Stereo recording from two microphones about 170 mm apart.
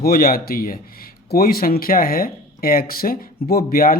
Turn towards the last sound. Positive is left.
turn(degrees=60)  # may be behind; listen again after turning